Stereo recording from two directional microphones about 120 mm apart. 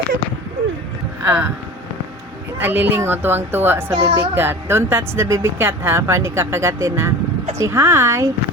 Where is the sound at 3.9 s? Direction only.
55° right (ahead or behind).